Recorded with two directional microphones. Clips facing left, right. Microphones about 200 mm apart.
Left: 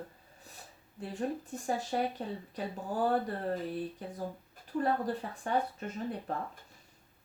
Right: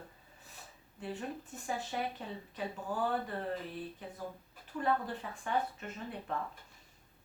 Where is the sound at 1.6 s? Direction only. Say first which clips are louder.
Left 5 dB; 35° left (ahead or behind).